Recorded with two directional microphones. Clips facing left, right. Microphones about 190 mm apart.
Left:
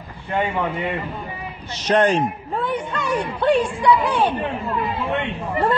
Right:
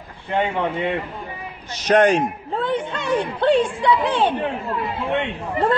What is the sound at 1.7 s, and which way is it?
Speech, 15° right (ahead or behind).